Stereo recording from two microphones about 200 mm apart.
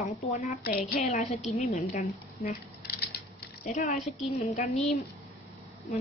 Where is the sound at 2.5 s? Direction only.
50° left (ahead or behind).